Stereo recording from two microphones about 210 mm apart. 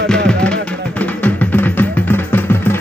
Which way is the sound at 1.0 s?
5° left (ahead or behind).